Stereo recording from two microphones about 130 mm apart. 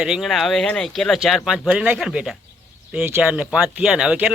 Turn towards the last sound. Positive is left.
turn(degrees=-10)  # may be behind; listen again after turning